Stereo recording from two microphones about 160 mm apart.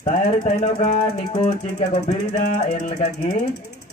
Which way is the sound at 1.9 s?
45° left (ahead or behind).